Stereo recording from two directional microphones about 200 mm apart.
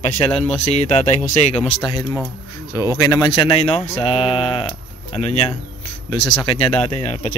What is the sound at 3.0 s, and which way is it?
Mantra, 20° left (ahead or behind).